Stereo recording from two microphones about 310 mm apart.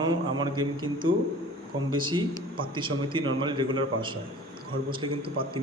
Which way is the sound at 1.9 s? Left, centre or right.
Centre.